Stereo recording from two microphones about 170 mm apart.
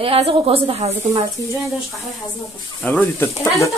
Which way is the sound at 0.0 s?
35° right (ahead or behind).